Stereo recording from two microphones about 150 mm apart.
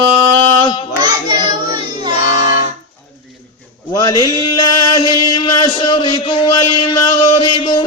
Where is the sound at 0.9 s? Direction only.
30° right (ahead or behind).